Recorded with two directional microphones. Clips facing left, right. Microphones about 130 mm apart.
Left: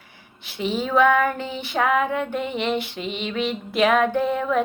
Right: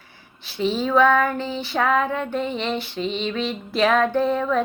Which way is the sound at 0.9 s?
15° left (ahead or behind).